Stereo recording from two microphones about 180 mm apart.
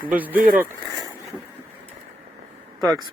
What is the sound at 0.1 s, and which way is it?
Speech, 10° right (ahead or behind).